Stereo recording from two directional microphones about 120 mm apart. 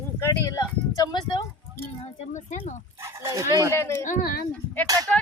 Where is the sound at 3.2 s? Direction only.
25° right (ahead or behind).